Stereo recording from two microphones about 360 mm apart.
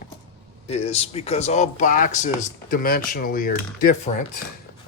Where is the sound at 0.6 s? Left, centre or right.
Centre.